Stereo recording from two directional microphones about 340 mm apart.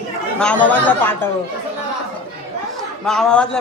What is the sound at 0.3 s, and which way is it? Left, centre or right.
Speech, centre.